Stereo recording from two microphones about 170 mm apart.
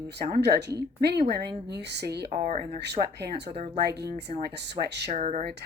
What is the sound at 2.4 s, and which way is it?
Speech, 45° right (ahead or behind).